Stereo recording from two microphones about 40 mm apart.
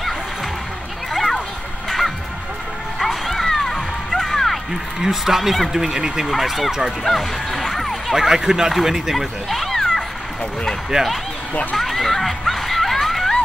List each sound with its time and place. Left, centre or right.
1.9 s music: centre
5.0 s speech: centre
6.3 s speech: centre
7.1 s music: centre
8.2 s speech: centre
9.5 s cat: centre
10.9 s speech: right
11.7 s snicker: centre